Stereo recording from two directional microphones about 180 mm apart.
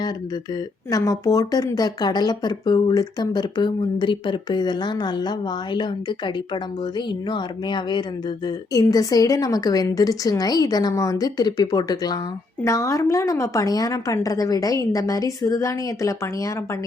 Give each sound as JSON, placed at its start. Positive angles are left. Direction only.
{"t": 0.9, "sound": "a woman's voice", "side_deg": 20}